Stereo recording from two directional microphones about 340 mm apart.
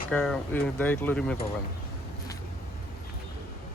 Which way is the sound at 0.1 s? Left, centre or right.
Centre.